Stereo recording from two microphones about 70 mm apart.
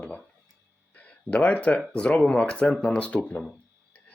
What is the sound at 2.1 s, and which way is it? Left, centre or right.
Speech, centre.